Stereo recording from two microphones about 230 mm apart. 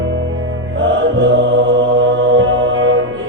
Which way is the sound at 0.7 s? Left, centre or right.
Right.